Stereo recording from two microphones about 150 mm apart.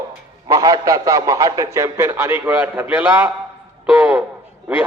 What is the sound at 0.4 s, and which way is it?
A man's voice, 25° right (ahead or behind).